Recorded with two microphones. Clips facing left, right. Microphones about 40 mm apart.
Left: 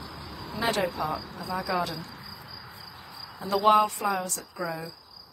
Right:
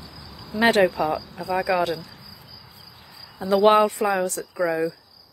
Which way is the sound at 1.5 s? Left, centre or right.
Right.